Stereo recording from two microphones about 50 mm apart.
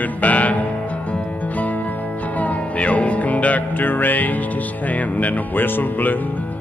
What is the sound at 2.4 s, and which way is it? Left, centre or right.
Music, left.